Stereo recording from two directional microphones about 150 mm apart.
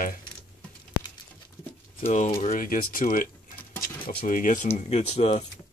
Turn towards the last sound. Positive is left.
turn(degrees=45)  # may be behind; listen again after turning